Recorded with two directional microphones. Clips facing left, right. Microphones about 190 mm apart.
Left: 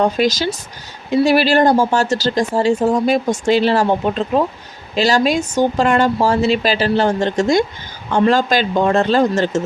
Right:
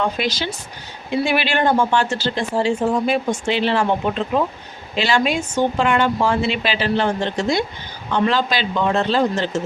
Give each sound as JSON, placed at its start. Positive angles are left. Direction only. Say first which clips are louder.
{"t": 0.0, "sound": "speech", "louder": "left 6 dB", "side_deg": 40}
{"t": 4.9, "sound": "speech", "louder": "left 4 dB", "side_deg": 40}